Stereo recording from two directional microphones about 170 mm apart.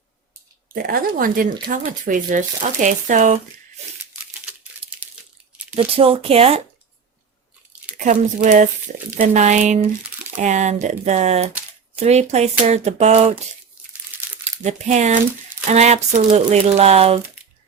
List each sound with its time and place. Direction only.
0.7 s speech: 60° right (ahead or behind)
4.8 s a sound: 35° right (ahead or behind)
5.7 s speech: 35° right (ahead or behind)
7.9 s speech: 50° right (ahead or behind)
14.6 s speech: 45° right (ahead or behind)